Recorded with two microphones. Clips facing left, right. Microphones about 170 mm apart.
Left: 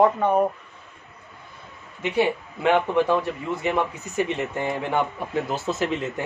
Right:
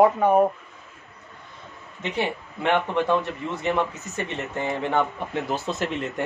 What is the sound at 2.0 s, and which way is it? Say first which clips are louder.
Speech: left 5 dB; 10° left (ahead or behind).